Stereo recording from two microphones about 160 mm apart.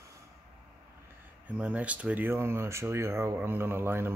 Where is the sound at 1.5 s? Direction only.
10° right (ahead or behind).